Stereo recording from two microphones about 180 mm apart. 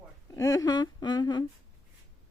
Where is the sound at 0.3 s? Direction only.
20° left (ahead or behind).